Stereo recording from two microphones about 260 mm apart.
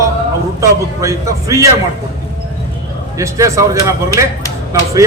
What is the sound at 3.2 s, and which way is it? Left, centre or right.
A man's voice, centre.